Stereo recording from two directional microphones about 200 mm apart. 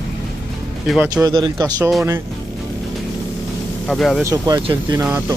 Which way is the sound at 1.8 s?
Centre (ahead or behind).